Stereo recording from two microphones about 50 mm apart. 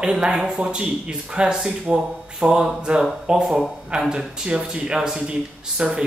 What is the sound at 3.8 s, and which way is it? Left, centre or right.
Speech, centre.